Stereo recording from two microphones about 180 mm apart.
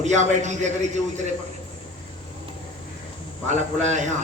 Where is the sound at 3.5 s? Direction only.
40° right (ahead or behind).